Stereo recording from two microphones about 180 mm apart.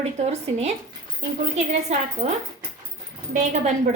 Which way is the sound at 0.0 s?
40° right (ahead or behind).